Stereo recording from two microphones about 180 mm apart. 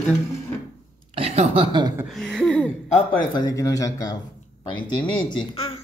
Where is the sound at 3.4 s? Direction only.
20° left (ahead or behind).